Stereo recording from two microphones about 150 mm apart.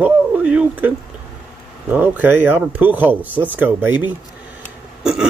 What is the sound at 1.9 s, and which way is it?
Speech, 10° right (ahead or behind).